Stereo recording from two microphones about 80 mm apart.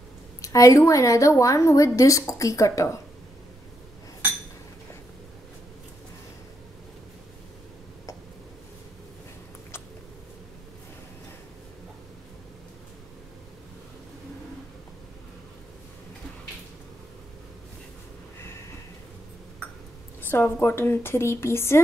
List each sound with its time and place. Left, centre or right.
0.4 s a woman's voice: left
20.2 s a woman's voice: left